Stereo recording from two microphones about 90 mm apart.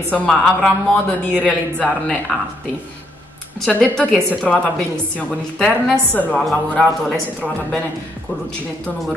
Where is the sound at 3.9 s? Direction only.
10° left (ahead or behind).